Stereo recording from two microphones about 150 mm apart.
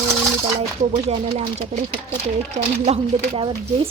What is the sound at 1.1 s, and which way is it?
A woman's voice, 50° right (ahead or behind).